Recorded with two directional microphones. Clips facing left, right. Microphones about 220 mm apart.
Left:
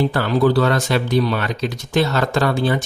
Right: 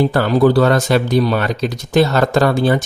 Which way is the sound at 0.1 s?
45° right (ahead or behind).